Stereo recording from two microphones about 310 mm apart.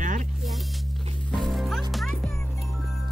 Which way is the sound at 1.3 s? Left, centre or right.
Centre.